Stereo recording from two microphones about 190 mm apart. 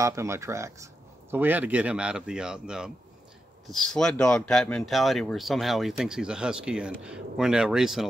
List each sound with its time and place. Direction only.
0.0 s speech: 15° right (ahead or behind)